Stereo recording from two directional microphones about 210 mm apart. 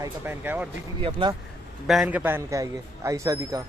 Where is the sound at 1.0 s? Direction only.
25° right (ahead or behind).